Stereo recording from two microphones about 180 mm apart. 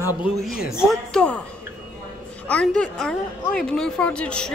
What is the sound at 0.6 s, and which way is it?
Speech, centre (ahead or behind).